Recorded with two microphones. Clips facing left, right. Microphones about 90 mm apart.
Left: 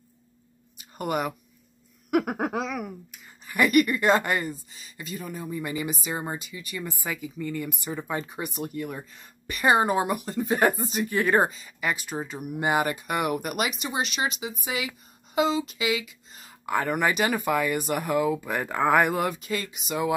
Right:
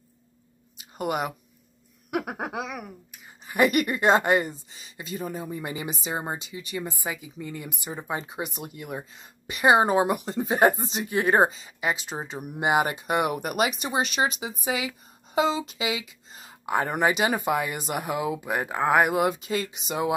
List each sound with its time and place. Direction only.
0.7 s a sound: 20° right (ahead or behind)
2.0 s speech: centre (ahead or behind)
3.4 s a woman's voice: 25° right (ahead or behind)
16.6 s a woman's voice: 20° right (ahead or behind)